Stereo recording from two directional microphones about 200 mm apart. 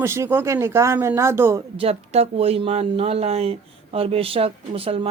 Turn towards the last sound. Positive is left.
turn(degrees=-30)  # may be behind; listen again after turning